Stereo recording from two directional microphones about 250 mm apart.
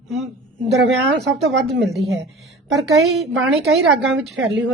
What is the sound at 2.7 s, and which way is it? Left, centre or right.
A woman's voice, centre.